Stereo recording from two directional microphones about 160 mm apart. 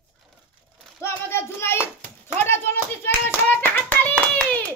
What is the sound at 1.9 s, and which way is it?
Clapping, 15° left (ahead or behind).